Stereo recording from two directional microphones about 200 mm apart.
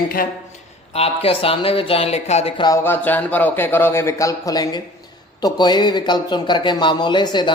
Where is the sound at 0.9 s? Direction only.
30° left (ahead or behind).